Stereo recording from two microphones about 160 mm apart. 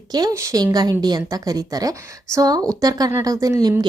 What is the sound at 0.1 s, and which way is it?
Speech, 25° right (ahead or behind).